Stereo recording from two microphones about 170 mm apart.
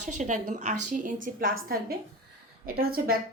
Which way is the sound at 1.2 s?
60° right (ahead or behind).